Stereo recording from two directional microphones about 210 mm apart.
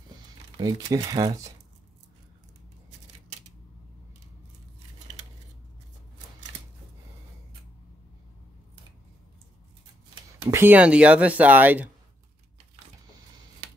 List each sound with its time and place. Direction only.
0.6 s speech: 20° right (ahead or behind)
10.5 s speech: 10° right (ahead or behind)